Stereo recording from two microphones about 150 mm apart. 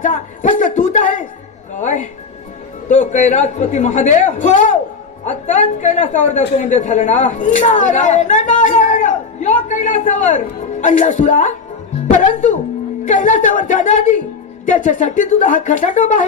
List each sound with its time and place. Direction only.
0.0 s a sound: 60° left (ahead or behind)
1.8 s music: 55° left (ahead or behind)
2.9 s a man's voice: 55° left (ahead or behind)